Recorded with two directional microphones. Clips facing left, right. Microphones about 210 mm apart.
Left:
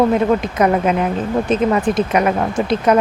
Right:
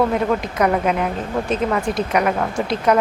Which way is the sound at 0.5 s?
25° left (ahead or behind).